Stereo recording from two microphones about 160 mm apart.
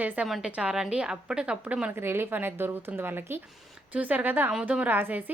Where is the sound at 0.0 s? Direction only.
10° right (ahead or behind).